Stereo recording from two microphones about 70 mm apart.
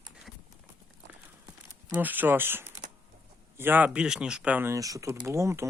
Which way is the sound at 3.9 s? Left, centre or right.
Centre.